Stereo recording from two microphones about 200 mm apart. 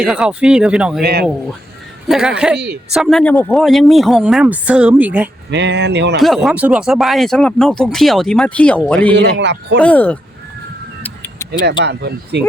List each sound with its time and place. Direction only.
0.0 s speech: 5° right (ahead or behind)
1.0 s speech: 50° right (ahead or behind)
2.0 s speech: 5° right (ahead or behind)
5.5 s speech: 60° right (ahead or behind)
6.1 s speech: centre (ahead or behind)
9.1 s speech: 60° right (ahead or behind)
9.8 s speech: 5° left (ahead or behind)
11.0 s music: 15° left (ahead or behind)
11.9 s speech: 55° right (ahead or behind)